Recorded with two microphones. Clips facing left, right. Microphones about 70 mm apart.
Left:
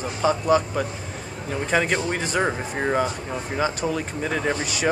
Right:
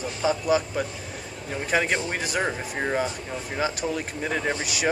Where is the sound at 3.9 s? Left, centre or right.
Centre.